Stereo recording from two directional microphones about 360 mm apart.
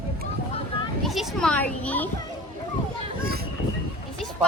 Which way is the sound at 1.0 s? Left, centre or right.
Centre.